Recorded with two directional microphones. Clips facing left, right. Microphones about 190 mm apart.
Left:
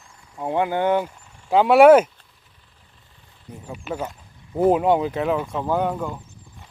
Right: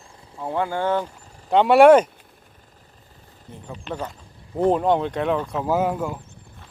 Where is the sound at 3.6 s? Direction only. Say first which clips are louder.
Left 2 dB; 10° left (ahead or behind).